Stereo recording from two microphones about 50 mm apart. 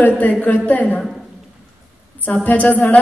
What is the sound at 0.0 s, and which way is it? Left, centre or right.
A woman's voice, left.